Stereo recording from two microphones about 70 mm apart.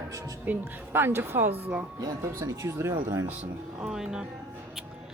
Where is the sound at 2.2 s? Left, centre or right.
Right.